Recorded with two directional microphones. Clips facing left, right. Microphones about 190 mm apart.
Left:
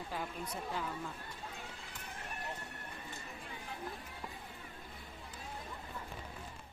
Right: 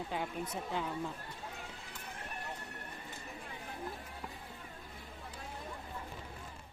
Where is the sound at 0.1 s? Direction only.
20° right (ahead or behind).